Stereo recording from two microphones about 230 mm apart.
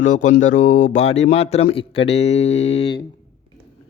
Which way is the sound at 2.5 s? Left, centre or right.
Left.